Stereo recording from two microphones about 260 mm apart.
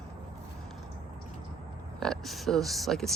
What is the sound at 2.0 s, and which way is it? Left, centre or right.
Speech, centre.